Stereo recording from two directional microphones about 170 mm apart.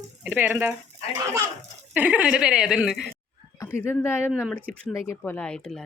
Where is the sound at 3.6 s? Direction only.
15° left (ahead or behind).